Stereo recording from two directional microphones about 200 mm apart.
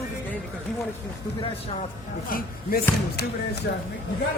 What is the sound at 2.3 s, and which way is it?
Speech, 50° left (ahead or behind).